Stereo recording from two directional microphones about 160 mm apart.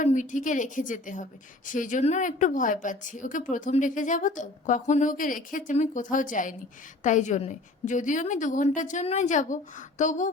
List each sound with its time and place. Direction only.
0.0 s a woman's voice: 50° left (ahead or behind)